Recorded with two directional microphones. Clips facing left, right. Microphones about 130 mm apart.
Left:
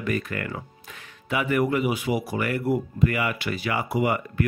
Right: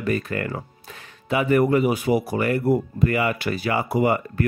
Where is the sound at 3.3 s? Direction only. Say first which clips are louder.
Right 4 dB; 45° right (ahead or behind).